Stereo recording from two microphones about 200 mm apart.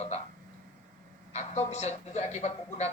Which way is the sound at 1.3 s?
30° left (ahead or behind).